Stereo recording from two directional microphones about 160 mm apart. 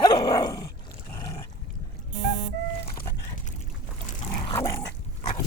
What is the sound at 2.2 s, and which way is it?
Music, 45° right (ahead or behind).